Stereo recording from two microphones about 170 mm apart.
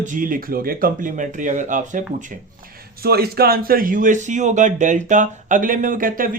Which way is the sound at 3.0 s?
65° right (ahead or behind).